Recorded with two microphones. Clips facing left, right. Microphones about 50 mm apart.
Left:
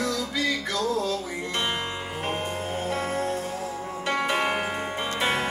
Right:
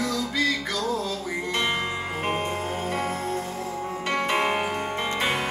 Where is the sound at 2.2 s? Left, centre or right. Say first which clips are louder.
Right 2 dB; centre.